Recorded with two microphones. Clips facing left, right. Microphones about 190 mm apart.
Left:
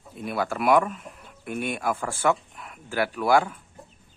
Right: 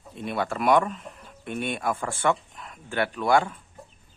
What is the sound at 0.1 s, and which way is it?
Speech, 5° left (ahead or behind).